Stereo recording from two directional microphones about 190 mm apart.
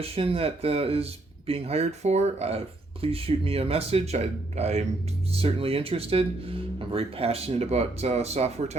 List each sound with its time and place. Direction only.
0.0 s speech: 30° right (ahead or behind)